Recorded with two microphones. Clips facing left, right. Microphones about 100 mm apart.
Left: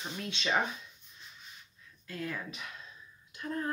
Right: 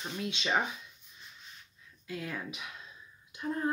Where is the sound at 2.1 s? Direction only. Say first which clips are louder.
Even; 10° right (ahead or behind).